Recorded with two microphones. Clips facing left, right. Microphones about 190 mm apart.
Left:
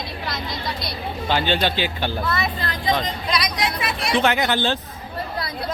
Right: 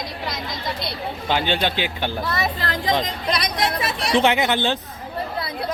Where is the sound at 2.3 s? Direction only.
40° right (ahead or behind).